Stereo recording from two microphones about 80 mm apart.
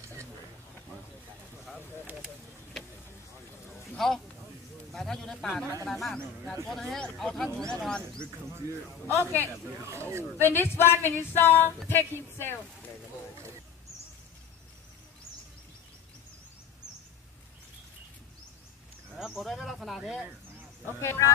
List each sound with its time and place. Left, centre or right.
3.9 s a sound: centre
4.9 s speech: centre
8.6 s a man's voice: right
9.0 s speech: left
9.8 s speech: right
10.4 s speech: left
19.1 s a sound: centre
21.0 s speech: left